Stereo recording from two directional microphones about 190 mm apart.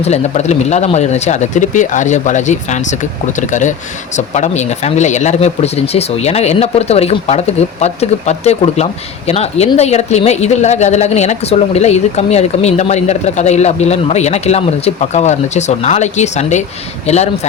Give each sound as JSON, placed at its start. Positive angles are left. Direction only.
{"t": 0.0, "sound": "a woman's voice", "side_deg": 35}